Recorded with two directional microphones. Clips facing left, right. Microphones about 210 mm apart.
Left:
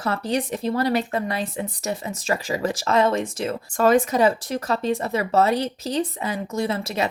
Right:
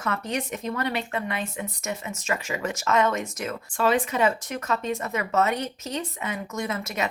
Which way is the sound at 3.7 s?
45° left (ahead or behind).